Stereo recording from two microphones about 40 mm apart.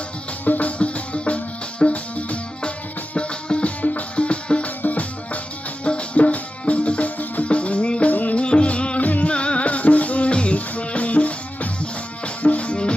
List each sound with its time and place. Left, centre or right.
0.4 s music: left
0.8 s music: left
5.8 s music: left
8.1 s music: left
8.4 s music: left
9.0 s music: left
9.3 s music: left